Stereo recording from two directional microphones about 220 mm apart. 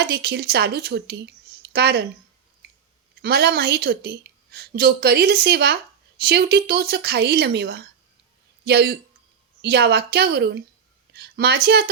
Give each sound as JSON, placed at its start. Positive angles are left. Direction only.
{"t": 0.0, "sound": "a woman's voice", "side_deg": -45}
{"t": 3.2, "sound": "a woman's voice", "side_deg": -50}